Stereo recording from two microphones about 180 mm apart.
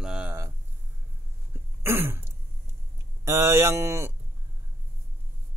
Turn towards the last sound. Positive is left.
turn(degrees=-15)  # may be behind; listen again after turning